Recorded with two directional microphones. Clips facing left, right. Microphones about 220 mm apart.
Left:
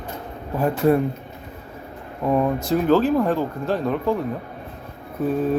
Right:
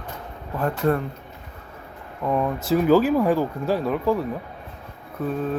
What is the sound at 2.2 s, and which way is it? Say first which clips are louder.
Speech: left 3 dB; 10° left (ahead or behind).